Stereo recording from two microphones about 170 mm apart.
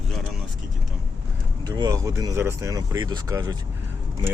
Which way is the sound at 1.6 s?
25° right (ahead or behind).